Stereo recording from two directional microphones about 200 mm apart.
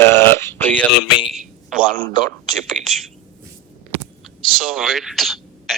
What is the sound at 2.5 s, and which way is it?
Speech, centre (ahead or behind).